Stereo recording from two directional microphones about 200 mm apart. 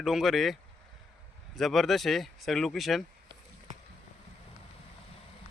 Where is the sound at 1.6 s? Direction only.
Centre (ahead or behind).